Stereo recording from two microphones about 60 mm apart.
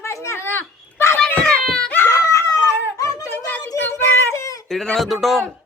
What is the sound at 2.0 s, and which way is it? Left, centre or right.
Dog, left.